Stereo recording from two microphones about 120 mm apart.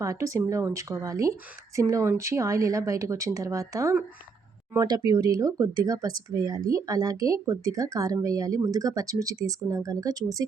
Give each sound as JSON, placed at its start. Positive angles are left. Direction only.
{"t": 0.0, "sound": "speech", "side_deg": -25}